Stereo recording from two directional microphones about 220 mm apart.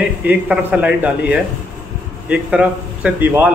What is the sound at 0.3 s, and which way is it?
A man's voice, 5° right (ahead or behind).